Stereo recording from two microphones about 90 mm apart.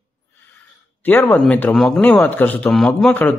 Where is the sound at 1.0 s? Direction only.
20° left (ahead or behind).